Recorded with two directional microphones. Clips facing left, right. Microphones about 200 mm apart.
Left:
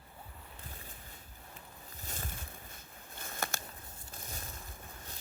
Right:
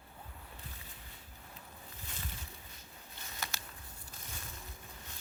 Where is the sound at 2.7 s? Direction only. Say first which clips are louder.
Left 3 dB; 50° left (ahead or behind).